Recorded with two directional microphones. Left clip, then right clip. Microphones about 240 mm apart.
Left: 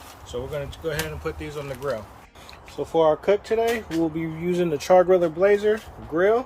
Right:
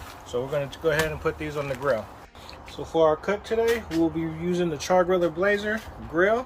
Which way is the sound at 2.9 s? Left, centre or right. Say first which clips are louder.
Left 2 dB; left.